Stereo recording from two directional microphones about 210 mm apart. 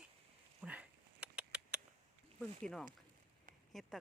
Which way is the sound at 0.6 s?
5° right (ahead or behind).